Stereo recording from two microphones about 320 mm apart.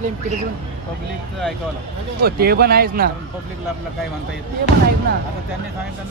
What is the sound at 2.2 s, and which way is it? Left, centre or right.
Speech, right.